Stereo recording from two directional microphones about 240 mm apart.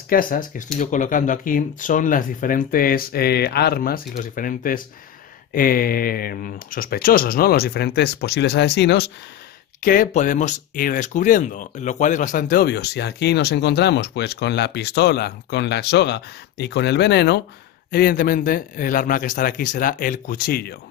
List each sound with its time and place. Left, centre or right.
0.1 s speech: left